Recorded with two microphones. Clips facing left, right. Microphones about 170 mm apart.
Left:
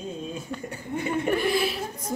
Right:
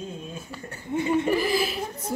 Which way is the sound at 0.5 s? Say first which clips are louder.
Right 5 dB; 5° right (ahead or behind).